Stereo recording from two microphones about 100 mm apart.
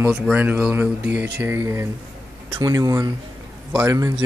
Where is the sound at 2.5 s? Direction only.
40° right (ahead or behind).